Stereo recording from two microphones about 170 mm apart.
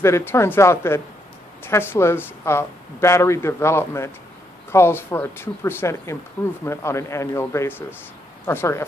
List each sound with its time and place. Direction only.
0.0 s speech: 15° left (ahead or behind)